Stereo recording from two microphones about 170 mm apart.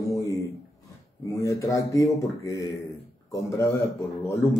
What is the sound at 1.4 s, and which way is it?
Speech, 20° left (ahead or behind).